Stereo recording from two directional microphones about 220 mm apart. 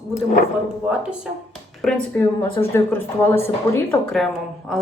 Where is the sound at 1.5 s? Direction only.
5° left (ahead or behind).